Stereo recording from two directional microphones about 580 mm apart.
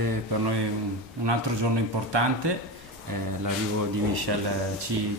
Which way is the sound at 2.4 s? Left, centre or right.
Right.